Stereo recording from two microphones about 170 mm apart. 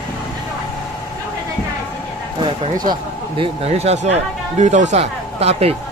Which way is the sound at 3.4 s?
40° right (ahead or behind).